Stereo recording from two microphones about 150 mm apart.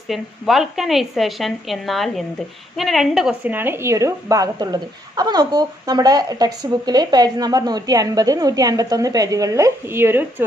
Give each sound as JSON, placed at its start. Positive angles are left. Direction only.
{"t": 0.1, "sound": "a woman's voice", "side_deg": 0}